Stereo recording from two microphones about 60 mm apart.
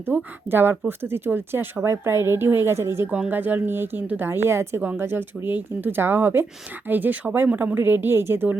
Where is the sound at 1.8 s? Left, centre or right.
Right.